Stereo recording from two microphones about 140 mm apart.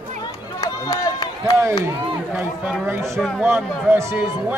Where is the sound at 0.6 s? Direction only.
25° left (ahead or behind).